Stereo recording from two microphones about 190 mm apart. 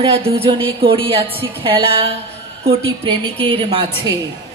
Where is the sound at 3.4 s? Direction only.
25° right (ahead or behind).